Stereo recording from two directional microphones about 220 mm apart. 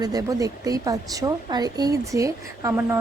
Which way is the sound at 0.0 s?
15° right (ahead or behind).